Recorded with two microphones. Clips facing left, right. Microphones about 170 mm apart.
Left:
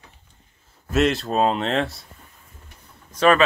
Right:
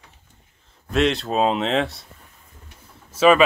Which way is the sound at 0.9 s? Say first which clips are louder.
Even; centre (ahead or behind).